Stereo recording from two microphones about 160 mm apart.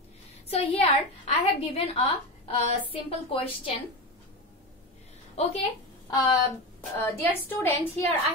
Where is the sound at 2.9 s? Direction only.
35° left (ahead or behind).